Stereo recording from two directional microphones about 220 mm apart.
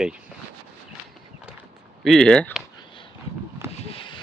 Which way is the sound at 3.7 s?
25° left (ahead or behind).